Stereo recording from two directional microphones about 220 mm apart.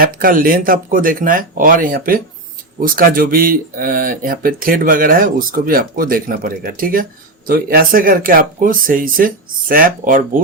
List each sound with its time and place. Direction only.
0.0 s speech: 40° right (ahead or behind)